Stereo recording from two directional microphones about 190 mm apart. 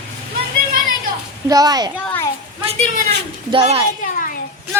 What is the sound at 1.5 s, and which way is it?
Speech, 20° right (ahead or behind).